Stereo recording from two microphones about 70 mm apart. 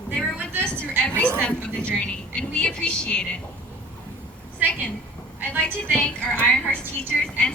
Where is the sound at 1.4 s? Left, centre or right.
Centre.